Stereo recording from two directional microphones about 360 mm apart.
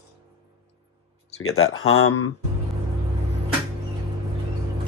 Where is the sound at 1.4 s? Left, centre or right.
Left.